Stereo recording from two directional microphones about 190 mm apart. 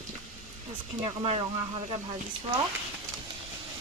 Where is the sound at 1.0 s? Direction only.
25° right (ahead or behind).